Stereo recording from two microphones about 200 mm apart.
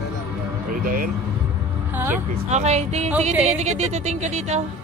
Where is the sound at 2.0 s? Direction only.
10° right (ahead or behind).